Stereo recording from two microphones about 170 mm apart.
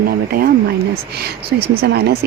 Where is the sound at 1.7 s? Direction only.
70° right (ahead or behind).